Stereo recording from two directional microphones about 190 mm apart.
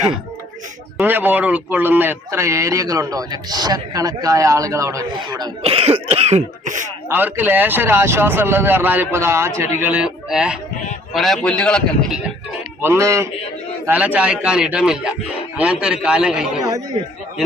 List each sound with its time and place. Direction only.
0.9 s a man's voice: 10° right (ahead or behind); by 6.8 s 40° right (ahead or behind)
7.1 s a man's voice: 10° right (ahead or behind)
12.8 s a man's voice: 15° right (ahead or behind)